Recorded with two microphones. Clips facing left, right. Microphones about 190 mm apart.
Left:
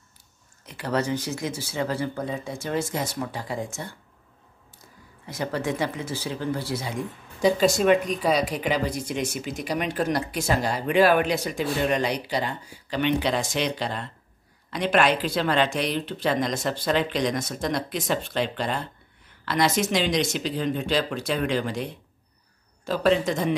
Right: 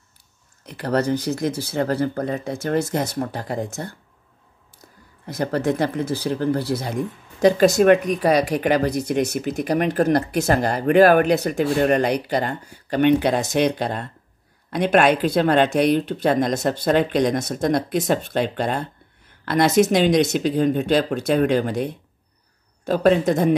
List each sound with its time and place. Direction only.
0.9 s speech: 60° right (ahead or behind)
5.2 s speech: 55° right (ahead or behind)